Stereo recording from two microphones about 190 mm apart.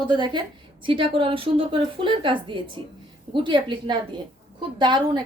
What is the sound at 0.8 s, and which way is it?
A woman's voice, 25° right (ahead or behind).